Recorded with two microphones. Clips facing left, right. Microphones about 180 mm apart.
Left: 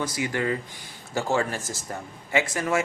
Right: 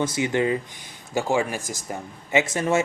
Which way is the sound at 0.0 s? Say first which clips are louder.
Right 5 dB; 25° right (ahead or behind).